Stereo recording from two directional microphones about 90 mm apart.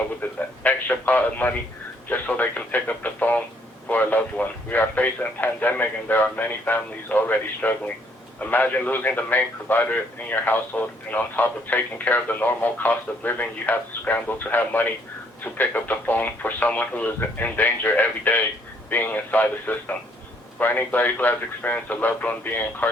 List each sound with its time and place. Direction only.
0.2 s radio: 20° left (ahead or behind)
2.0 s a man's voice: 20° left (ahead or behind)